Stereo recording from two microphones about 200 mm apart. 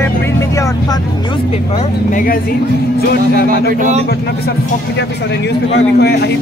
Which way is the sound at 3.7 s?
40° right (ahead or behind).